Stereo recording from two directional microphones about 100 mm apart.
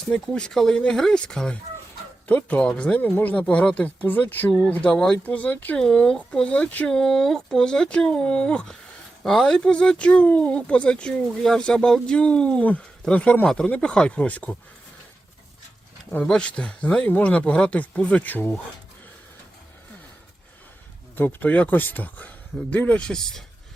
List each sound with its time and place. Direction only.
0.1 s speech: 10° left (ahead or behind)
16.2 s speech: 10° left (ahead or behind)
21.2 s speech: 20° left (ahead or behind)